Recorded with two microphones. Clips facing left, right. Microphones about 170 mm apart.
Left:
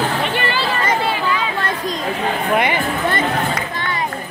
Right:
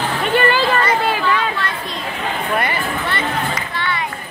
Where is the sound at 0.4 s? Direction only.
45° right (ahead or behind).